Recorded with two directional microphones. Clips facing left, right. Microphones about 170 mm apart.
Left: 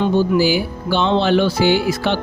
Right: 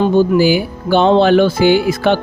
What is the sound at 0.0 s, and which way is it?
Speech, 50° right (ahead or behind).